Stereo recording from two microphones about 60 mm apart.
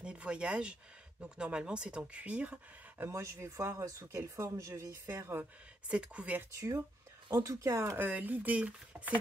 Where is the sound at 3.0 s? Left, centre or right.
Right.